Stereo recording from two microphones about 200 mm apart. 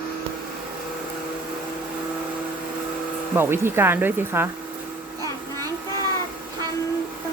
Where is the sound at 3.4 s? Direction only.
10° right (ahead or behind).